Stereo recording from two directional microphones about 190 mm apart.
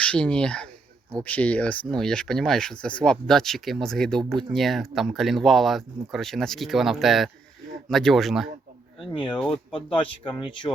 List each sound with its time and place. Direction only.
0.0 s speech: 5° left (ahead or behind)
9.7 s speech: 30° left (ahead or behind)